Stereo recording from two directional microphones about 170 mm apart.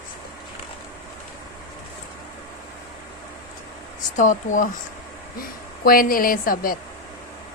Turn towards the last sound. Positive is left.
turn(degrees=55)  # may be behind; listen again after turning